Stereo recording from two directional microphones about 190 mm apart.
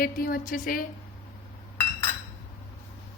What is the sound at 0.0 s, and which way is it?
Speech, 50° left (ahead or behind).